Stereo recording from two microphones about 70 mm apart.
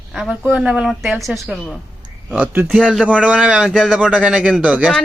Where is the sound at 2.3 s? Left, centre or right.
Right.